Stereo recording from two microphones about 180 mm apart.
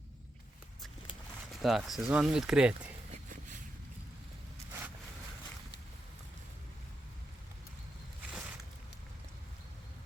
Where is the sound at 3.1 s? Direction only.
45° right (ahead or behind).